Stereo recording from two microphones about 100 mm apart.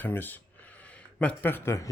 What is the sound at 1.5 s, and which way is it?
Speech, 25° left (ahead or behind).